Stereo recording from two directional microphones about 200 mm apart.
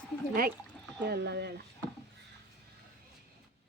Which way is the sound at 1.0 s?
55° right (ahead or behind).